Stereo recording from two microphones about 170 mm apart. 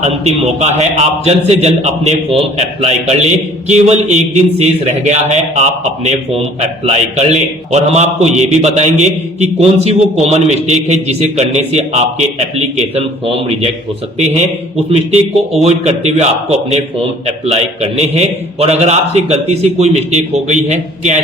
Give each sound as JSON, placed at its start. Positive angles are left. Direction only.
{"t": 0.0, "sound": "a man's voice", "side_deg": -40}
{"t": 15.6, "sound": "a man's voice", "side_deg": -40}